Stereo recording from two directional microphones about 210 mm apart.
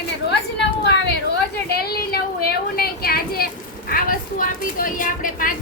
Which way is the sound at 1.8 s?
45° left (ahead or behind).